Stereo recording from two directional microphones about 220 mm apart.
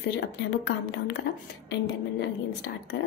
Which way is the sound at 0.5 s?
55° left (ahead or behind).